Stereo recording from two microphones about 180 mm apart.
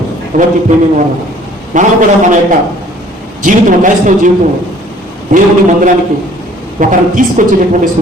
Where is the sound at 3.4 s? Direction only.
45° right (ahead or behind).